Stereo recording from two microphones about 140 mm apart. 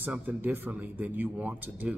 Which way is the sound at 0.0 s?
15° right (ahead or behind).